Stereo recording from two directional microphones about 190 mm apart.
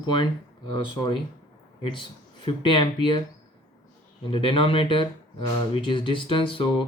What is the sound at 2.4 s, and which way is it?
Speech, 25° left (ahead or behind).